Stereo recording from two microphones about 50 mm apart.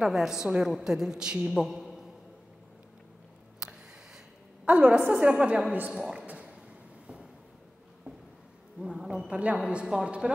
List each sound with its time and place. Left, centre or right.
0.0 s a man's voice: centre
1.5 s a man's voice: centre
3.5 s a sound: centre
4.6 s a woman's voice: right
6.2 s a sound: right
8.7 s a man's voice: centre
9.3 s a woman's voice: right